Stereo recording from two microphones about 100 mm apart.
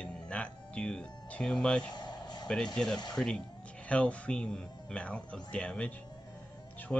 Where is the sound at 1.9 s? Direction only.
45° left (ahead or behind).